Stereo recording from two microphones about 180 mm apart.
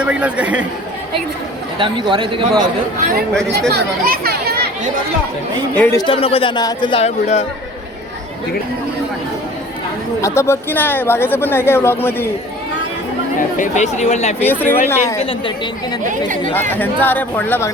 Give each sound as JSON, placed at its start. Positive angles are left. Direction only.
{"t": 0.0, "sound": "speech", "side_deg": -5}
{"t": 1.8, "sound": "a man's voice", "side_deg": -25}
{"t": 3.7, "sound": "speech", "side_deg": -60}
{"t": 5.7, "sound": "speech", "side_deg": 10}
{"t": 6.0, "sound": "speech", "side_deg": 30}
{"t": 10.2, "sound": "speech", "side_deg": 15}
{"t": 13.6, "sound": "speech", "side_deg": 40}
{"t": 14.3, "sound": "speech", "side_deg": 10}
{"t": 15.2, "sound": "speech", "side_deg": 30}
{"t": 16.6, "sound": "speech", "side_deg": 10}